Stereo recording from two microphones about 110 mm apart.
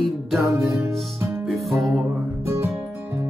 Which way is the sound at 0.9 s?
25° right (ahead or behind).